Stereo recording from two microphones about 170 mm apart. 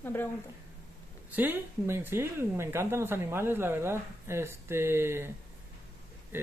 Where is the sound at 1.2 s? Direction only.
10° right (ahead or behind).